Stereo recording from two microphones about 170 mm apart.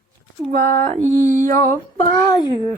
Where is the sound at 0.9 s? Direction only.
45° right (ahead or behind).